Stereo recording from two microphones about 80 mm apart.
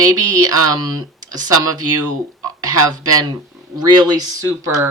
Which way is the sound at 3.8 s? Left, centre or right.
Right.